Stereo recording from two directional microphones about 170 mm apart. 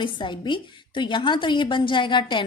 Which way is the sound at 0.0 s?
30° left (ahead or behind).